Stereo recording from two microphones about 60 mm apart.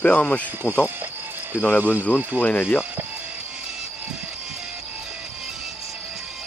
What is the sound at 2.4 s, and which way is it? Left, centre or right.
Speech, left.